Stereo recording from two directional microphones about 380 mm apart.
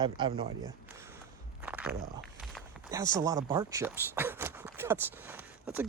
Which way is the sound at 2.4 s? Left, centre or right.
Centre.